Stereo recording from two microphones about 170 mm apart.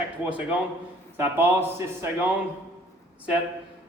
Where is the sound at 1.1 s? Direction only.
10° right (ahead or behind).